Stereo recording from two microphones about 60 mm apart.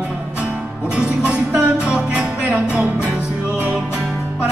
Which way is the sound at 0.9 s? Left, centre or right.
Centre.